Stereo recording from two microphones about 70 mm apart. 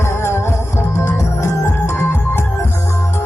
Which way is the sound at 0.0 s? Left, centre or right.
Left.